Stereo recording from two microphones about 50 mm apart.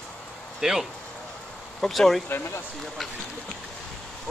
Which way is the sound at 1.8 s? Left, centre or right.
Centre.